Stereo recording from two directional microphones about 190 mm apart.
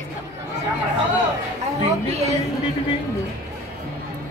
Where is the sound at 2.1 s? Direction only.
35° right (ahead or behind).